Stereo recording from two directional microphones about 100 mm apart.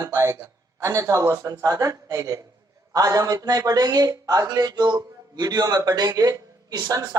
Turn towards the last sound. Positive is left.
turn(degrees=-40)  # may be behind; listen again after turning